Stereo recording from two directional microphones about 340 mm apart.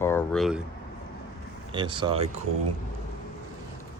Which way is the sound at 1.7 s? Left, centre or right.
Centre.